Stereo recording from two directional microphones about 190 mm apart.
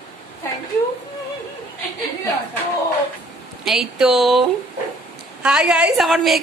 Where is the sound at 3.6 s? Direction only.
Centre (ahead or behind).